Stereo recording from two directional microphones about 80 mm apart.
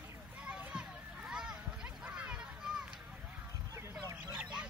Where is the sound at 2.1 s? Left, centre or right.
Centre.